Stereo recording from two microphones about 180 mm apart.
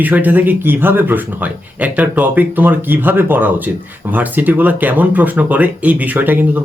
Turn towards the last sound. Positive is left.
turn(degrees=-10)  # may be behind; listen again after turning